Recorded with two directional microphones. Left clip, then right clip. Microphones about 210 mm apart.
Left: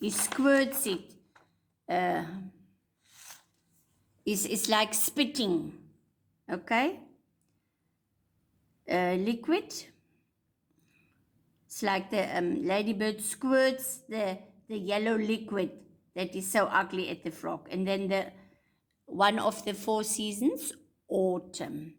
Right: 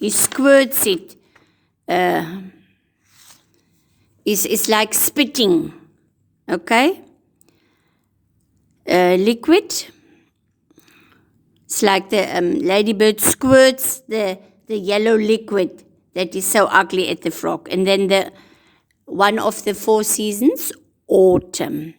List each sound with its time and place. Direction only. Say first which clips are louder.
0.0 s a woman's voice: right 12 dB; 45° right (ahead or behind)
4.2 s a woman's voice: right 13 dB; 45° right (ahead or behind)
8.8 s a woman's voice: right 15 dB; 50° right (ahead or behind)
10.8 s whispering: right 18 dB; 45° right (ahead or behind)
11.7 s a woman's voice: right 14 dB; 50° right (ahead or behind)